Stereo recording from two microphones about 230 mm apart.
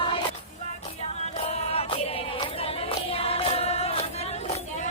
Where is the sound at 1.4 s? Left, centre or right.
Left.